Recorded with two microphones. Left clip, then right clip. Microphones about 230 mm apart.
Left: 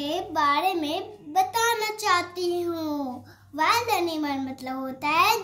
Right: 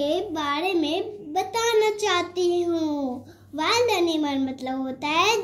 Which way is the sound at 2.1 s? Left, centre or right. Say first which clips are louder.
Right 1 dB; left.